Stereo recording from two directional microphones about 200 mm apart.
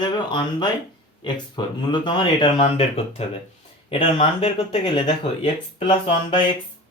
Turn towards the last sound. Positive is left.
turn(degrees=25)  # may be behind; listen again after turning